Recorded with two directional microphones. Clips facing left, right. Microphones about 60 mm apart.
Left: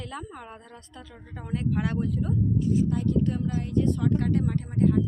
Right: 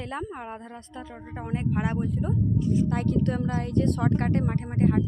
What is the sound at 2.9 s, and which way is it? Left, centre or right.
Speech, right.